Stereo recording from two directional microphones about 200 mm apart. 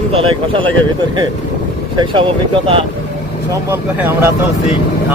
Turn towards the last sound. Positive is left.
turn(degrees=-15)  # may be behind; listen again after turning